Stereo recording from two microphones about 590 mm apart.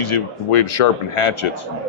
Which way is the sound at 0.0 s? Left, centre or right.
Left.